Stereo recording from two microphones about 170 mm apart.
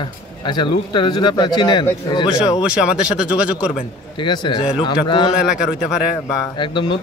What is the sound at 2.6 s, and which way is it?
Speech, 5° right (ahead or behind).